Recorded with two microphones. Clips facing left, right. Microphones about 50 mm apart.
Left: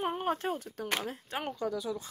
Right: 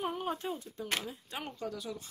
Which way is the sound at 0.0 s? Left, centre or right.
Left.